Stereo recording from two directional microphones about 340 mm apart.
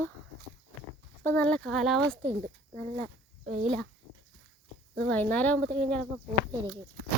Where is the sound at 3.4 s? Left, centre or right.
Centre.